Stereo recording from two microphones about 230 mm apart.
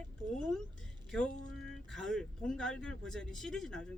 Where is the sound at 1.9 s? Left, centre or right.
Centre.